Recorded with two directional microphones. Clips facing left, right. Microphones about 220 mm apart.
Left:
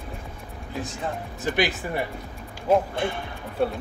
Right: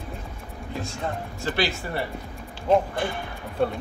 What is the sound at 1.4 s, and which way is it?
Speech, 15° left (ahead or behind).